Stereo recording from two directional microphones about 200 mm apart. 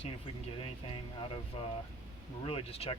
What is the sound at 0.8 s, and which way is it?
Speech, 30° left (ahead or behind).